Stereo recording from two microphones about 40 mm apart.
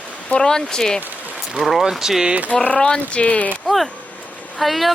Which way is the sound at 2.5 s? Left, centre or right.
Left.